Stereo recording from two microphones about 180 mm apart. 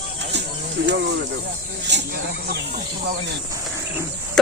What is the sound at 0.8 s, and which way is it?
Speech, 75° right (ahead or behind).